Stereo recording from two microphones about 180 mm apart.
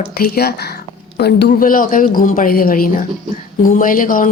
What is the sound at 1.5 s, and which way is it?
A woman's voice, 50° left (ahead or behind).